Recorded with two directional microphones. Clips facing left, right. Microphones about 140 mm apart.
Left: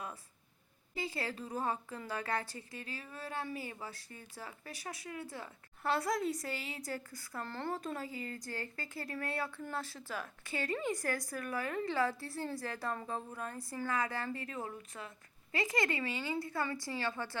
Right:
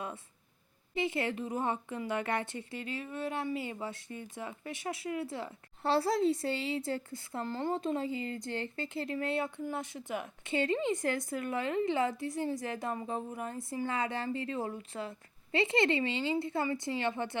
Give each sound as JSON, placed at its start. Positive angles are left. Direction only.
{"t": 0.9, "sound": "speech", "side_deg": -20}